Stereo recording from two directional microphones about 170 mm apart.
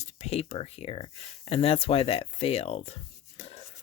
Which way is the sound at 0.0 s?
40° left (ahead or behind).